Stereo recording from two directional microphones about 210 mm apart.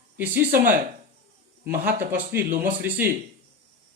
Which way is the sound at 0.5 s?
40° right (ahead or behind).